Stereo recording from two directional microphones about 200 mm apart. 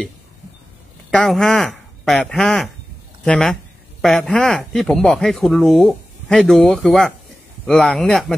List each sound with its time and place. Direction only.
1.1 s speech: centre (ahead or behind)